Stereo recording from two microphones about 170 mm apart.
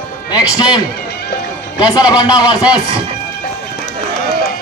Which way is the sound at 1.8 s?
25° left (ahead or behind).